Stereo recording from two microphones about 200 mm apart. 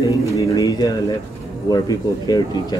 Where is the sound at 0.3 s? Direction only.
20° left (ahead or behind).